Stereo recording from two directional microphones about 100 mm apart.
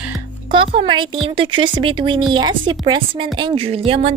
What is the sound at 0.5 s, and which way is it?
A woman's voice, 60° right (ahead or behind).